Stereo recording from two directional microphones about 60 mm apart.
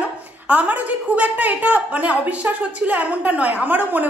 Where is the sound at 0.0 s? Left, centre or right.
Right.